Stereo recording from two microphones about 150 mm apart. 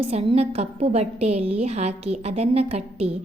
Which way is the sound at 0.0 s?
40° right (ahead or behind).